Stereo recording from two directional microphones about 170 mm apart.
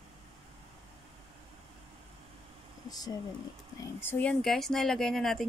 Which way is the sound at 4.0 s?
10° left (ahead or behind).